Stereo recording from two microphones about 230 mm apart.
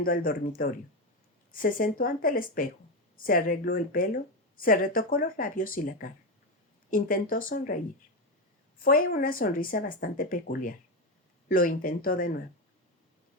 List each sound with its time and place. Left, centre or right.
0.0 s speech: left
8.8 s speech: left